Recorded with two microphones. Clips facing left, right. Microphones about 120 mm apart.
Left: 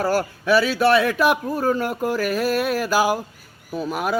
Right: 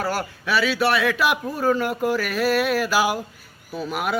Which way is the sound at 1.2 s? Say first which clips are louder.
Left 3 dB; 45° left (ahead or behind).